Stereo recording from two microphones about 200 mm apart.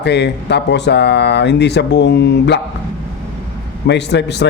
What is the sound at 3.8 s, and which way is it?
Speech, 60° left (ahead or behind).